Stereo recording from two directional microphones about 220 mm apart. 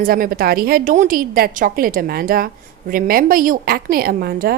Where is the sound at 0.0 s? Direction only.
40° right (ahead or behind).